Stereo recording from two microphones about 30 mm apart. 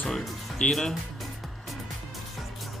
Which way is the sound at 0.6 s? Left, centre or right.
Left.